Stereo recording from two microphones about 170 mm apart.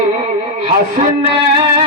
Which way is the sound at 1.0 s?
45° right (ahead or behind).